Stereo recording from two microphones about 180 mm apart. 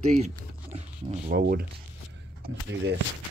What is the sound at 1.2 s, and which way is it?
Speech, 55° right (ahead or behind).